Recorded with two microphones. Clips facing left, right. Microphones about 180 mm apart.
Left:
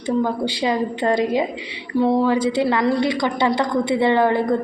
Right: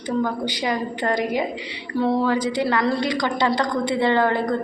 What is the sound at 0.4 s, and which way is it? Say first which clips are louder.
A woman's voice: left 4 dB; 25° left (ahead or behind).